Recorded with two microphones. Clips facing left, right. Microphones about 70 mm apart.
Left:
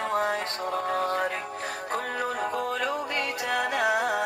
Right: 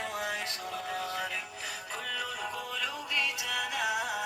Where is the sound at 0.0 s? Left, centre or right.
Left.